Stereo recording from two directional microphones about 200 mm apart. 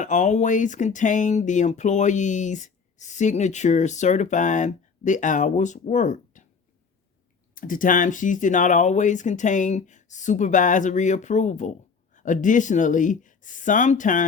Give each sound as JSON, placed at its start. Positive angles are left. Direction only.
{"t": 0.0, "sound": "speech", "side_deg": 40}
{"t": 7.5, "sound": "speech", "side_deg": 45}